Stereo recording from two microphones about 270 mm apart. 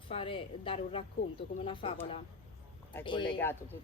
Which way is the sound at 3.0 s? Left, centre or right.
Centre.